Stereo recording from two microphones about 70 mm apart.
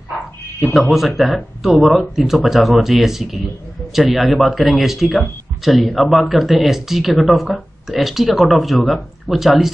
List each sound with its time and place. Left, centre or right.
0.6 s speech: centre